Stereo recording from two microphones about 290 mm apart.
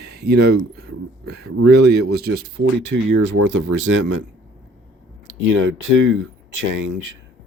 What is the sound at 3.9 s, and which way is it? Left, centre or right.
Speech, right.